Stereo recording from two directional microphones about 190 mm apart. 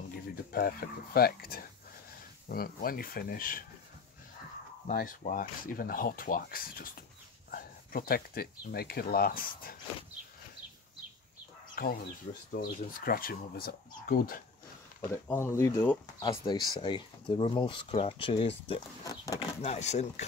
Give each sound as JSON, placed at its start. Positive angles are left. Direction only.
{"t": 0.5, "sound": "speech", "side_deg": 50}
{"t": 4.8, "sound": "speech", "side_deg": 45}
{"t": 11.7, "sound": "speech", "side_deg": 50}
{"t": 15.0, "sound": "speech", "side_deg": 10}
{"t": 16.2, "sound": "speech", "side_deg": 25}
{"t": 19.0, "sound": "speech", "side_deg": 20}
{"t": 19.6, "sound": "speech", "side_deg": 35}